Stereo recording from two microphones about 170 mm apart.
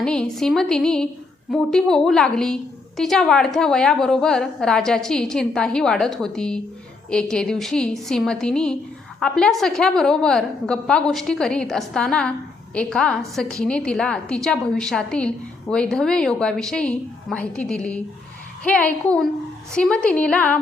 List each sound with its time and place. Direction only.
0.0 s a woman's voice: 5° left (ahead or behind)